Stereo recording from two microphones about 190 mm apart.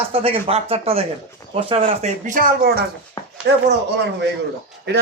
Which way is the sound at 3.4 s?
65° right (ahead or behind).